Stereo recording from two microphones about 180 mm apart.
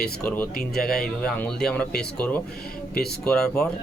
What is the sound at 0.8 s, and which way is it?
A man's voice, 5° left (ahead or behind).